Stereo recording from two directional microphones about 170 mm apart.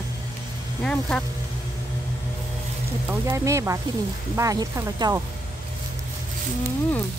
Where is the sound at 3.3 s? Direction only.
15° right (ahead or behind).